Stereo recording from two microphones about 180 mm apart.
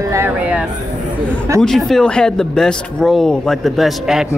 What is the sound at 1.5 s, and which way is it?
Speech, centre (ahead or behind).